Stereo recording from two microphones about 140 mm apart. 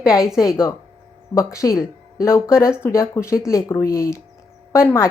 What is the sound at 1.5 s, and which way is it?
Speech, 20° left (ahead or behind).